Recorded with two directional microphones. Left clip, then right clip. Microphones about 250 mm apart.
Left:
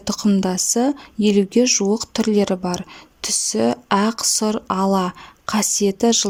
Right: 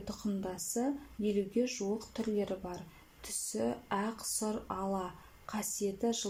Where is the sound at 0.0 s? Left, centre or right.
Left.